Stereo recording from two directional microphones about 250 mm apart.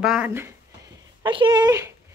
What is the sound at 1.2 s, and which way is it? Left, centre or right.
Speech, centre.